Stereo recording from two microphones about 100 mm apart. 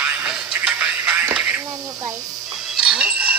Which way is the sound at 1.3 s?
10° right (ahead or behind).